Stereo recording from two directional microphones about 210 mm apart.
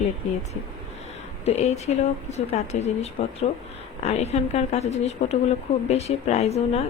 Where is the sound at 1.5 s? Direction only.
30° left (ahead or behind).